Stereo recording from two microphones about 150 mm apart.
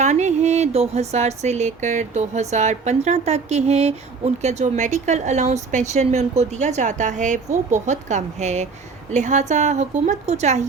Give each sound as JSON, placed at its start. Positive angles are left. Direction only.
{"t": 0.0, "sound": "speech", "side_deg": -50}